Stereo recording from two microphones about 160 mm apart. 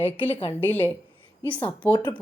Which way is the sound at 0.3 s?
35° left (ahead or behind).